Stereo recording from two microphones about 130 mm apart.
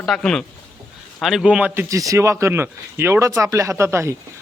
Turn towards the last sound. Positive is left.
turn(degrees=-20)  # may be behind; listen again after turning